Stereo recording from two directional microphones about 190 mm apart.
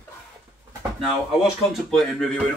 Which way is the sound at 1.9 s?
Centre (ahead or behind).